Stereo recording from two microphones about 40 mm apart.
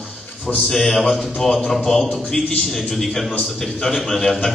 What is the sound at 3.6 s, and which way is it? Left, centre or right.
Speech, centre.